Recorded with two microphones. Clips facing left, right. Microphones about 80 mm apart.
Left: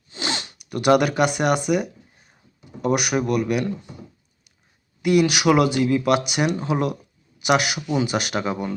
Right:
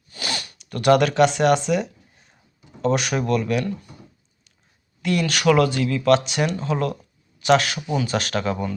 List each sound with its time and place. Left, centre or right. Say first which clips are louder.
0.1 s zipper: left 2 dB; left
0.6 s speech: right 1 dB; centre
5.0 s speech: left 2 dB; centre